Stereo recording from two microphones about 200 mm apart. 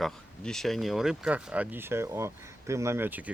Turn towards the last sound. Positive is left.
turn(degrees=-10)  # may be behind; listen again after turning